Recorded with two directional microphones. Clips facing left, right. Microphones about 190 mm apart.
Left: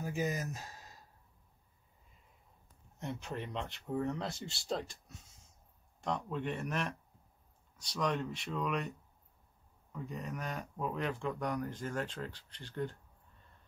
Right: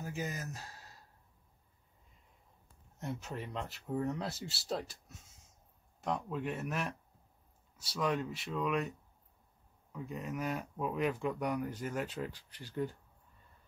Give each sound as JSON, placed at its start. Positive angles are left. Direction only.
{"t": 0.0, "sound": "a sound", "side_deg": 15}
{"t": 3.0, "sound": "speech", "side_deg": -5}
{"t": 9.9, "sound": "speech", "side_deg": 0}